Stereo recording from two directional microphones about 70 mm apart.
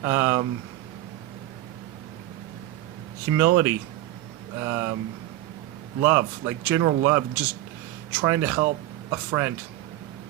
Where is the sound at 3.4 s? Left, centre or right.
Right.